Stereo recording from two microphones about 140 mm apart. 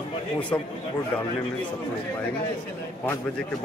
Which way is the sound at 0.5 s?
20° left (ahead or behind).